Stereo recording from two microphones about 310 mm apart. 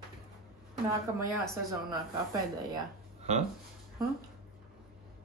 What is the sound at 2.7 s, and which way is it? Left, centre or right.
Speech, right.